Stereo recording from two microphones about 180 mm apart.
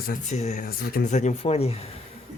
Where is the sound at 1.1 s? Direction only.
40° left (ahead or behind).